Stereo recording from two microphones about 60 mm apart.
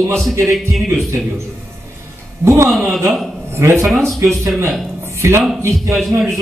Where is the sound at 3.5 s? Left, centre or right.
Right.